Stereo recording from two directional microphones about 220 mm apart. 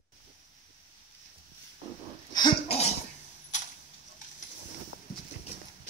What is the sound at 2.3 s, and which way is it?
Cough, 25° left (ahead or behind).